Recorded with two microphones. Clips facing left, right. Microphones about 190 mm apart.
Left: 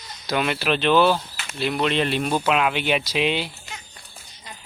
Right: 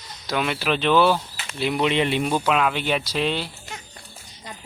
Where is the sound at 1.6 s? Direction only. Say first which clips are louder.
Right 1 dB; 10° right (ahead or behind).